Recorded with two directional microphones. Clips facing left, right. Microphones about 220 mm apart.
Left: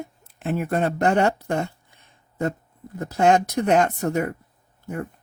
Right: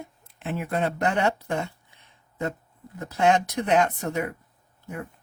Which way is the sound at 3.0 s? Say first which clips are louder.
Left 3 dB; 40° left (ahead or behind).